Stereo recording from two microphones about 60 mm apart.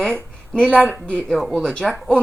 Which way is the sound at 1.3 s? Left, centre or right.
Centre.